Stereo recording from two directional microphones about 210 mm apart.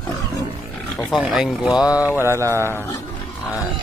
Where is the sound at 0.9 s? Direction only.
Centre (ahead or behind).